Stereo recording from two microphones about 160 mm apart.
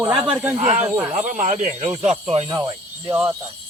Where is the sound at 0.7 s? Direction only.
40° right (ahead or behind).